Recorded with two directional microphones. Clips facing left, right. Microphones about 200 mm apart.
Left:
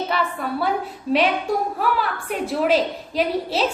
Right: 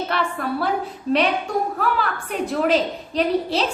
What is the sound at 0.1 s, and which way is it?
Speech, centre (ahead or behind).